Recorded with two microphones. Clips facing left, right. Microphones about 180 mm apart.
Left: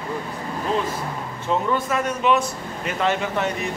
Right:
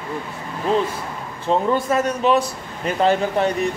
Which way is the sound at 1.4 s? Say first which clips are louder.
Right 4 dB; 30° right (ahead or behind).